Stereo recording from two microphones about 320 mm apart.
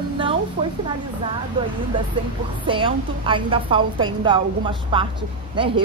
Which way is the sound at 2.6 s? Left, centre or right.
Centre.